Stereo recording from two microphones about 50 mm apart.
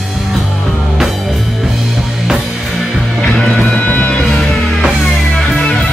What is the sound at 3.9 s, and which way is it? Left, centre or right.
Music, left.